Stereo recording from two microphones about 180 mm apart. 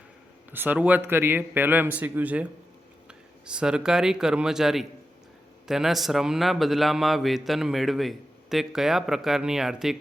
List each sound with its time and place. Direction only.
0.5 s a man's voice: 10° right (ahead or behind)